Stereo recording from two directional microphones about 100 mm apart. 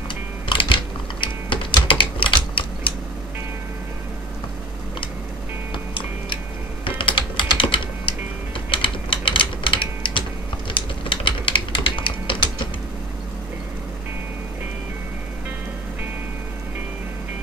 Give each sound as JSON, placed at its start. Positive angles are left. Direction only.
{"t": 0.1, "sound": "music", "side_deg": 55}
{"t": 1.2, "sound": "typing", "side_deg": 60}
{"t": 5.9, "sound": "typing", "side_deg": 55}